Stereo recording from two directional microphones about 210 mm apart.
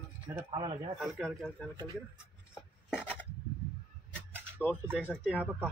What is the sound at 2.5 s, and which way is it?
Rub, 10° left (ahead or behind).